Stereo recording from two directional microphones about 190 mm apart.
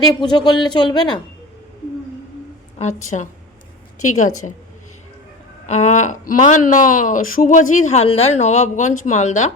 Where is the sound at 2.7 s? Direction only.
35° left (ahead or behind).